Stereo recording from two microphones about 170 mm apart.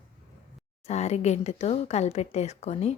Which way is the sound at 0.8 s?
40° left (ahead or behind).